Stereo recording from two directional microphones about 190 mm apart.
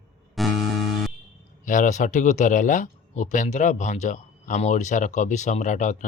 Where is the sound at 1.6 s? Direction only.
40° left (ahead or behind).